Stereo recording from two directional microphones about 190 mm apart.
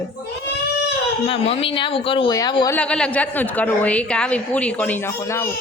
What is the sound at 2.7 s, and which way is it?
A woman's voice, 5° left (ahead or behind).